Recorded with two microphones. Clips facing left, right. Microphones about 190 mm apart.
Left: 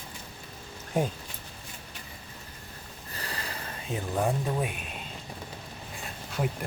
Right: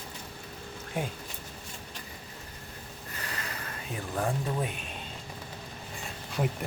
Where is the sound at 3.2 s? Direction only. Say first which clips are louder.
Left 2 dB; 35° left (ahead or behind).